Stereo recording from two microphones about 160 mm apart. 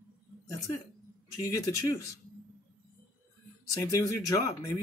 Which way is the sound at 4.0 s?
20° left (ahead or behind).